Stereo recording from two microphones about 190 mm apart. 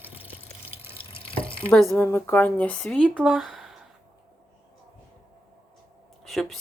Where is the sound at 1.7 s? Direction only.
Centre (ahead or behind).